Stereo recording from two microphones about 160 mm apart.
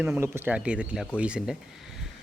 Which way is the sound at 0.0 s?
10° right (ahead or behind).